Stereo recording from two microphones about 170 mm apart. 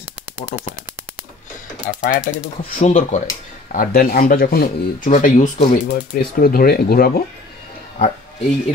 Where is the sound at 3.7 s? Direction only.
60° left (ahead or behind).